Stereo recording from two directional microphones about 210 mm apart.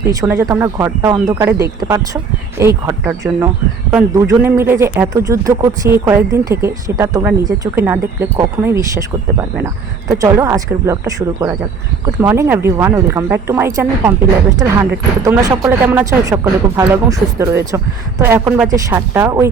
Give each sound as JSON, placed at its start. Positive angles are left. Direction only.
{"t": 0.1, "sound": "speech", "side_deg": -15}